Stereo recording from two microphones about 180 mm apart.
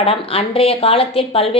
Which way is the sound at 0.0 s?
30° left (ahead or behind).